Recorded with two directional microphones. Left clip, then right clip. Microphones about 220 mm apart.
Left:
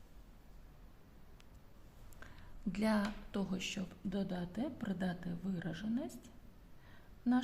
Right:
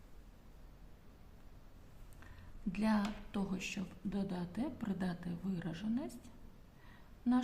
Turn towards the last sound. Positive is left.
turn(degrees=15)  # may be behind; listen again after turning